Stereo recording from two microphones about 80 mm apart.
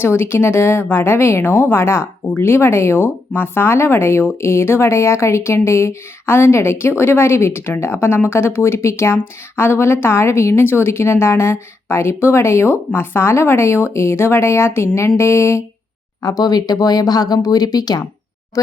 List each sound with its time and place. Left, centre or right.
0.0 s speech: left
16.2 s speech: left